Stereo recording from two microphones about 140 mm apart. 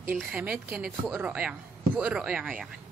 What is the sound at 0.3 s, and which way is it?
A woman's voice, 10° right (ahead or behind).